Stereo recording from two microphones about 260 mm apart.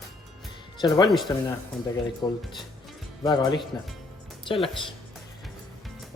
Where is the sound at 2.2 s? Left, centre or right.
Centre.